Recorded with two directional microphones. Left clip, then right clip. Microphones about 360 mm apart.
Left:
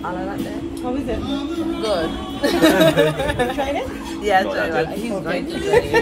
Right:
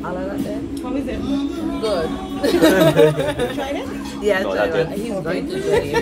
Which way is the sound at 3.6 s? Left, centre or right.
Centre.